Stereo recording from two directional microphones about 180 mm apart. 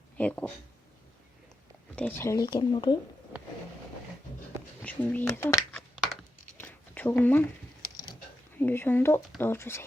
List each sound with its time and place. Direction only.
0.2 s speech: 5° left (ahead or behind)
2.0 s speech: 10° left (ahead or behind)
4.8 s speech: 10° left (ahead or behind)
6.6 s a sound: 10° left (ahead or behind)
8.5 s speech: 10° left (ahead or behind)